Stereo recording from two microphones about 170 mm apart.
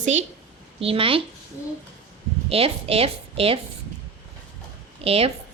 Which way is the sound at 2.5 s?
35° right (ahead or behind).